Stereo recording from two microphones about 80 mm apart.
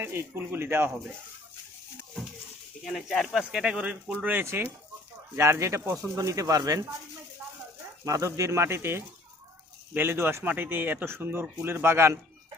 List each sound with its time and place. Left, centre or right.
0.0 s speech: right
2.8 s speech: centre
3.6 s speech: centre
5.4 s speech: right
8.0 s speech: right